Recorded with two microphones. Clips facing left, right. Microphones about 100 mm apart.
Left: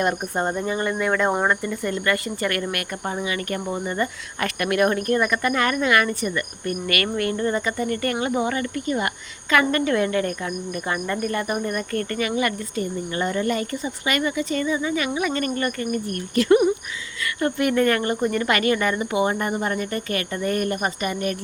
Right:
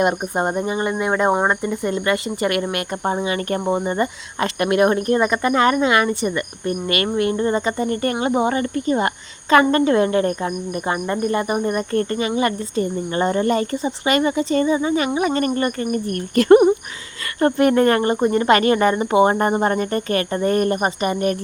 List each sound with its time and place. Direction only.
0.0 s speech: 20° right (ahead or behind)
16.0 s speech: 45° right (ahead or behind)